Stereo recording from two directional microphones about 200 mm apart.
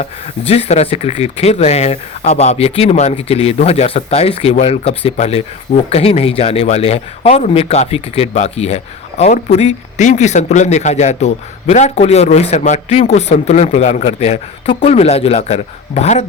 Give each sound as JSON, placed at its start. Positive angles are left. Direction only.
{"t": 0.0, "sound": "speech", "side_deg": 30}